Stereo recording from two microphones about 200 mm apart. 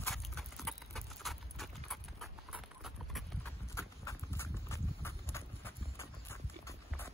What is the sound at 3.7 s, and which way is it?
Clip-clop, 15° left (ahead or behind).